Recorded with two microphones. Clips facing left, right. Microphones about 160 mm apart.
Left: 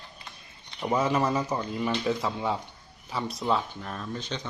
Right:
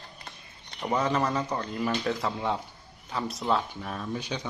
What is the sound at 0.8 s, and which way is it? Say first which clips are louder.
Speech: left 1 dB; 5° left (ahead or behind).